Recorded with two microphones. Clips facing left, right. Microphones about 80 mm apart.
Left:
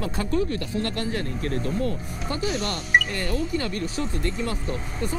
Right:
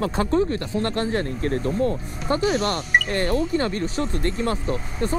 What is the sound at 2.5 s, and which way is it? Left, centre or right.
Speech, right.